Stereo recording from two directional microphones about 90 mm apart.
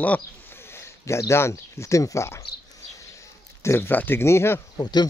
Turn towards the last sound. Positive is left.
turn(degrees=50)  # may be behind; listen again after turning